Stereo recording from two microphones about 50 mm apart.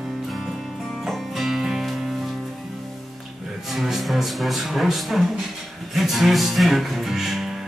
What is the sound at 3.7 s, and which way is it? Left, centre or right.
Speech, centre.